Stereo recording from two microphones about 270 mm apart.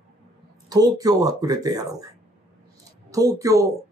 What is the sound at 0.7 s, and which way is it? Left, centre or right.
Speech, centre.